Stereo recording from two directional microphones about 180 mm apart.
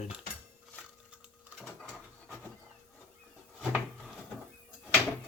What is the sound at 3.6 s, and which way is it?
Drawer open or close, centre (ahead or behind).